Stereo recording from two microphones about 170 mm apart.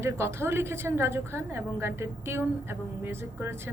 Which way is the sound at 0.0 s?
15° right (ahead or behind).